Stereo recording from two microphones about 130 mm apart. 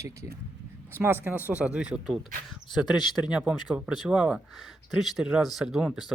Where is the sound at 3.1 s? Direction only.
5° right (ahead or behind).